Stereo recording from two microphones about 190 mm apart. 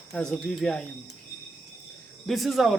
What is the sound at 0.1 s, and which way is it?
Speech, centre (ahead or behind).